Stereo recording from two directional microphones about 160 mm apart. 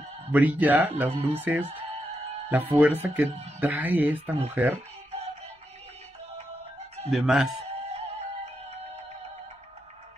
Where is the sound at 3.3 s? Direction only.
40° right (ahead or behind).